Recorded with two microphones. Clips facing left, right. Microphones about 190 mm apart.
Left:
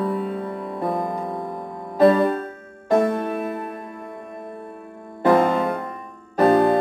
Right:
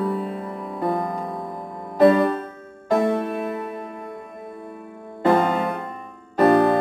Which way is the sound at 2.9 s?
Centre (ahead or behind).